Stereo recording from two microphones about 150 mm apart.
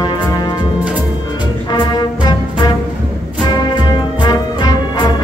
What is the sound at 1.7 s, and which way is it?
Music, 30° left (ahead or behind).